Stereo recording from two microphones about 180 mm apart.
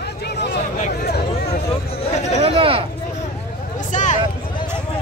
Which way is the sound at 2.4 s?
30° right (ahead or behind).